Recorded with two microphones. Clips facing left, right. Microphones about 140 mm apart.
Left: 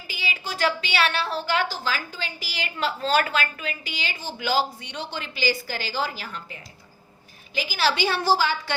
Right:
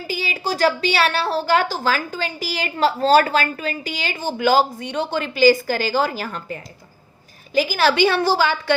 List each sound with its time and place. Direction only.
0.1 s a woman's voice: 40° right (ahead or behind); by 8.7 s 60° right (ahead or behind)